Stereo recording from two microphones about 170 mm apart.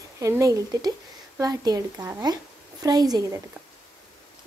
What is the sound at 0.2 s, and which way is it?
A woman's voice, 20° right (ahead or behind).